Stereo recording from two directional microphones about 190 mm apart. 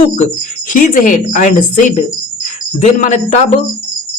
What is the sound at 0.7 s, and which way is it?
A man's voice, 45° left (ahead or behind).